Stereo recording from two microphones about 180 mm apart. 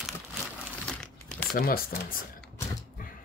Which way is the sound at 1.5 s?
55° left (ahead or behind).